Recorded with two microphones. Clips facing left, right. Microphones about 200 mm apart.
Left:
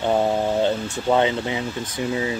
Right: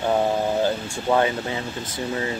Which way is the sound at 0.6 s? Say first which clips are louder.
Left 2 dB; 20° left (ahead or behind).